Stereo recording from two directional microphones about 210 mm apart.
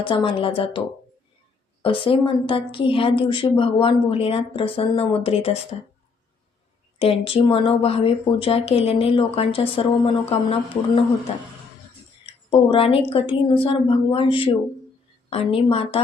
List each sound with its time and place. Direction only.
0.0 s speech: 25° left (ahead or behind)
1.8 s speech: 25° left (ahead or behind)
7.0 s speech: 25° left (ahead or behind)
12.2 s speech: 25° left (ahead or behind)